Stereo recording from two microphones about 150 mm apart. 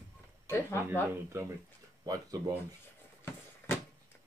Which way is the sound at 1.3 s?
20° right (ahead or behind).